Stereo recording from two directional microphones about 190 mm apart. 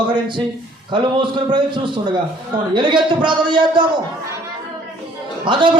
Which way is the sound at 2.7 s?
25° right (ahead or behind).